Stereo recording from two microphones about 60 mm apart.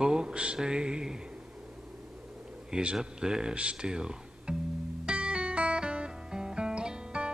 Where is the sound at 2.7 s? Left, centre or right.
Centre.